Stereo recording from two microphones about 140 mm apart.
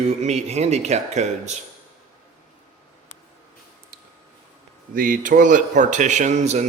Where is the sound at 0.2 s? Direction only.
50° right (ahead or behind).